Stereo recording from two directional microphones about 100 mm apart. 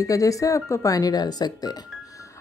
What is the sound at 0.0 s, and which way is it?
A woman's voice, 35° left (ahead or behind).